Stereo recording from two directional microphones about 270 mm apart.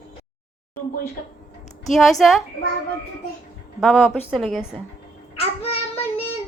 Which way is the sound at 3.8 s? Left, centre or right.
Centre.